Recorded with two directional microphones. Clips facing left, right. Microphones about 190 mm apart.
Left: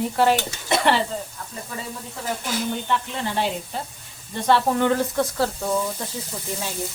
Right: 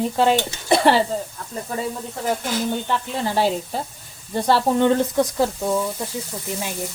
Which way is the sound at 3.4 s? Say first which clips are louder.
Right 6 dB; 40° right (ahead or behind).